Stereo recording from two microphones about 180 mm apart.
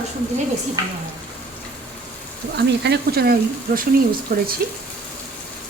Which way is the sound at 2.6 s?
70° right (ahead or behind).